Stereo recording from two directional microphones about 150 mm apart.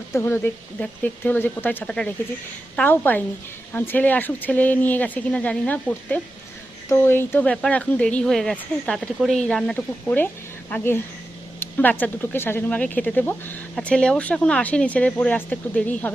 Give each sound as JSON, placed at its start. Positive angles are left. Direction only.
{"t": 0.1, "sound": "speech", "side_deg": 15}